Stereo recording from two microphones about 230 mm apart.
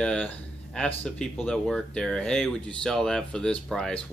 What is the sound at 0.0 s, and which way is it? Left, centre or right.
Speech, centre.